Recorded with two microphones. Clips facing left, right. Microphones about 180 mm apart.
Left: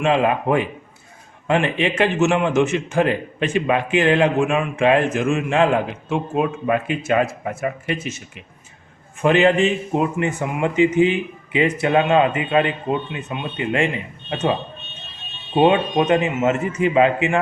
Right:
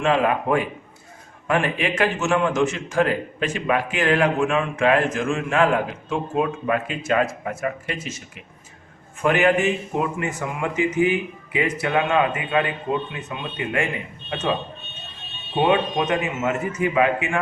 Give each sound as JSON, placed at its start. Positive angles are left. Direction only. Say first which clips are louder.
{"t": 0.0, "sound": "a man's voice", "louder": "left 2 dB", "side_deg": 20}
{"t": 9.2, "sound": "a man's voice", "louder": "left 3 dB", "side_deg": 25}
{"t": 15.6, "sound": "a man's voice", "louder": "left 4 dB", "side_deg": 25}